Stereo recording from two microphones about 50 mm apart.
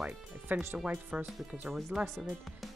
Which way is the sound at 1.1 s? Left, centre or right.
Centre.